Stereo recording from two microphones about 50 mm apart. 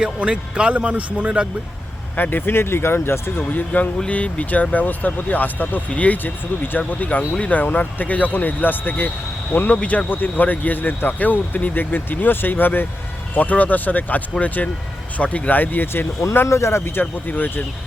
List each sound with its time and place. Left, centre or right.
0.0 s speech: right
2.1 s speech: left
3.5 s speech: left
9.5 s speech: left
13.3 s speech: left
16.6 s speech: left
17.2 s speech: left